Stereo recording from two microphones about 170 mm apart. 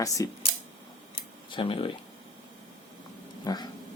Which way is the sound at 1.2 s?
30° left (ahead or behind).